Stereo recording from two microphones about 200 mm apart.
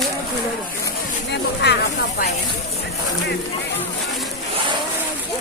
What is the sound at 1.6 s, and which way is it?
Snake, 60° left (ahead or behind).